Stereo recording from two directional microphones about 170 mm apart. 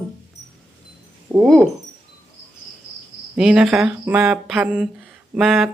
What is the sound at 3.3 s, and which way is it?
Speech, 5° right (ahead or behind).